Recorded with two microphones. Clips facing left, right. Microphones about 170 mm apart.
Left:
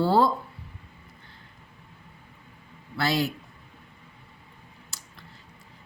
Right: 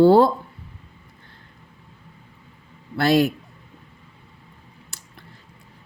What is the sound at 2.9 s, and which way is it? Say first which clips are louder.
Speech: right 8 dB; 55° right (ahead or behind).